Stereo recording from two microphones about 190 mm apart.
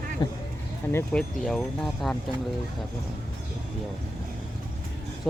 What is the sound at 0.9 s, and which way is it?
Speech, 5° left (ahead or behind).